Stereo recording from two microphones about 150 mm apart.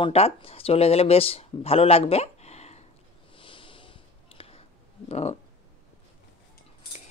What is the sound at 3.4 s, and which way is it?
Snort, 35° left (ahead or behind).